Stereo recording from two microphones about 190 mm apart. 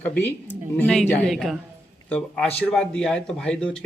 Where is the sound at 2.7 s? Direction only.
5° left (ahead or behind).